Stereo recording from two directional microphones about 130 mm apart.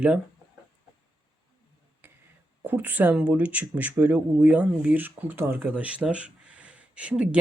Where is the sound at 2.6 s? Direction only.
15° right (ahead or behind).